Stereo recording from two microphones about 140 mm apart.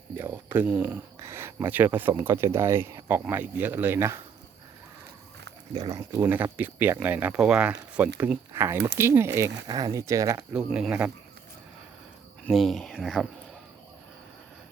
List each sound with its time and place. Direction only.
0.2 s speech: 15° right (ahead or behind)
5.7 s speech: 25° right (ahead or behind)
6.2 s speech: 10° right (ahead or behind)
10.5 s speech: 5° right (ahead or behind)
12.5 s speech: centre (ahead or behind)